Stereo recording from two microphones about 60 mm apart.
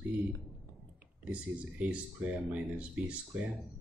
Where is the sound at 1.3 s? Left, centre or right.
Right.